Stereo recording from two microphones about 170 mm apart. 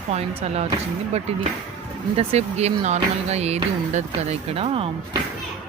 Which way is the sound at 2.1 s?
40° right (ahead or behind).